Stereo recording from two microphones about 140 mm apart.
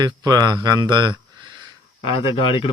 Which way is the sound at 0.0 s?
30° right (ahead or behind).